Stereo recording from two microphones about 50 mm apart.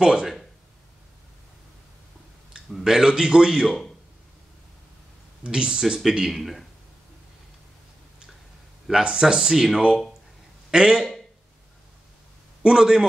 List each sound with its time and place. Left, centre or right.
0.0 s speech: centre
2.5 s a man's voice: centre
5.4 s speech: centre
9.0 s speech: centre
10.7 s a man's voice: centre
12.6 s speech: centre